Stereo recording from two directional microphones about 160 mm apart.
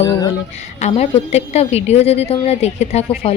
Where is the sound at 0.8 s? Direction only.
40° left (ahead or behind).